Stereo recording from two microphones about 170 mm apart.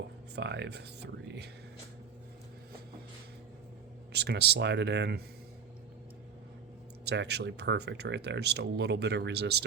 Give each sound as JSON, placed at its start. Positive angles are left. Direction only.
{"t": 0.3, "sound": "speech", "side_deg": -90}
{"t": 4.1, "sound": "speech", "side_deg": -75}
{"t": 7.0, "sound": "speech", "side_deg": -80}